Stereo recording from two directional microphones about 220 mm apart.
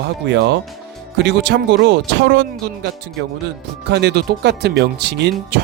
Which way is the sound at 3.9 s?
50° right (ahead or behind).